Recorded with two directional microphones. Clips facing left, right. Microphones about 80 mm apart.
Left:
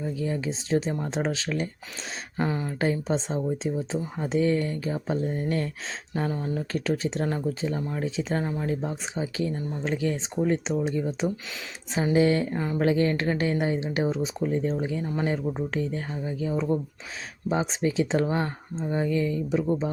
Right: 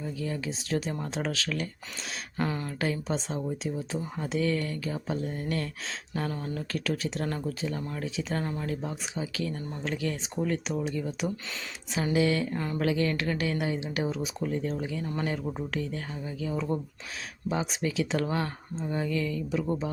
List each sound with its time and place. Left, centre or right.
0.0 s speech: left
2.4 s speech: centre
2.8 s speech: left
12.5 s speech: centre
12.8 s speech: left